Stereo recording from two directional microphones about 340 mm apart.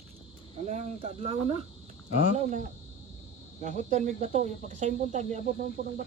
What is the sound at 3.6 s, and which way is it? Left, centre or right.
Speech, right.